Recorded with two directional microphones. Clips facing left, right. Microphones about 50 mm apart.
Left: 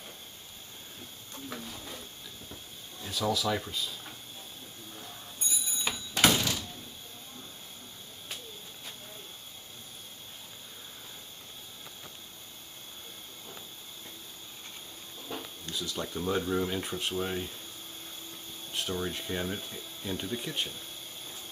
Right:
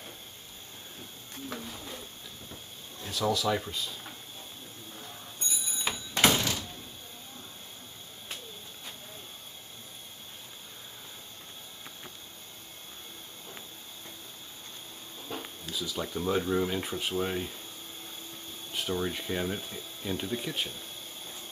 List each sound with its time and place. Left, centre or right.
1.5 s a sound: centre
2.5 s drawer open or close: centre
5.5 s door: centre
15.1 s a sound: centre
15.6 s speech: centre
18.7 s speech: centre